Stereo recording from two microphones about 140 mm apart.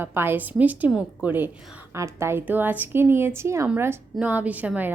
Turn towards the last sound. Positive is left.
turn(degrees=-10)  # may be behind; listen again after turning